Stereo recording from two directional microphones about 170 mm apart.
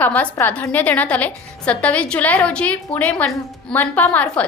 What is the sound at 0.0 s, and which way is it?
A woman's voice, 10° left (ahead or behind).